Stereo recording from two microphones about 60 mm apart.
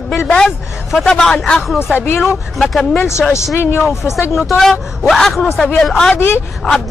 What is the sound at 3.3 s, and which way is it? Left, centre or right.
Speech, left.